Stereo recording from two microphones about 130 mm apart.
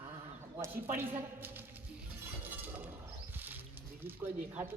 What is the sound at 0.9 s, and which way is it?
Speech, 15° right (ahead or behind).